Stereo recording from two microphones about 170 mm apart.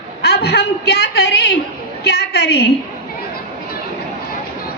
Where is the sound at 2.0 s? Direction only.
75° left (ahead or behind).